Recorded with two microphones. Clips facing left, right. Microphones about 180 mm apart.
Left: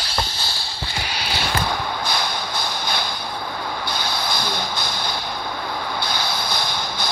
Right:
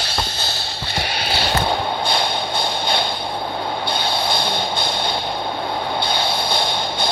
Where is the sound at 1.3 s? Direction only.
30° right (ahead or behind).